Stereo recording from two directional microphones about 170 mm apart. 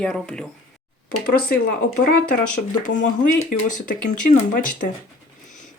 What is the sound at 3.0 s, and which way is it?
Speech, 45° left (ahead or behind).